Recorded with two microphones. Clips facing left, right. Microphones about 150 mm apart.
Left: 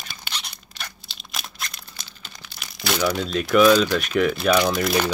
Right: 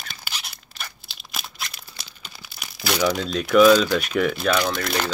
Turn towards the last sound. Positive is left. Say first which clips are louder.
# left 3 dB
turn(degrees=5)  # may be behind; listen again after turning